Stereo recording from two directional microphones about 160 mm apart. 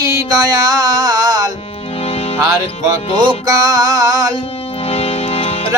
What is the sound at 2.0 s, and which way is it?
Music, 40° left (ahead or behind).